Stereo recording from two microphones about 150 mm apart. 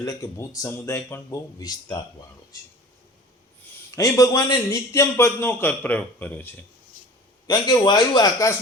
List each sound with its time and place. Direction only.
0.0 s a man's voice: 25° left (ahead or behind)
3.9 s a man's voice: 20° left (ahead or behind)
7.4 s a man's voice: 30° left (ahead or behind)